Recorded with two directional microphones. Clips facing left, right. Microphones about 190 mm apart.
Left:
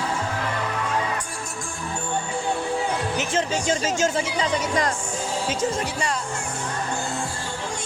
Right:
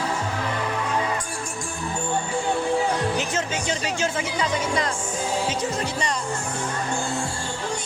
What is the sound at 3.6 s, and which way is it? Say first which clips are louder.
Speech: left 3 dB; 40° left (ahead or behind).